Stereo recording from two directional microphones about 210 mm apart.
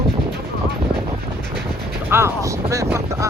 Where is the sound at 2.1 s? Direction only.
10° right (ahead or behind).